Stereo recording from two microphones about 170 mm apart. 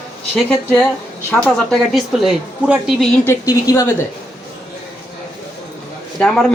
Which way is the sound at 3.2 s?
15° left (ahead or behind).